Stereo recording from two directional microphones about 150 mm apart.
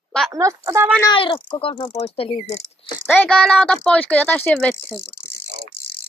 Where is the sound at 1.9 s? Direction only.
45° left (ahead or behind).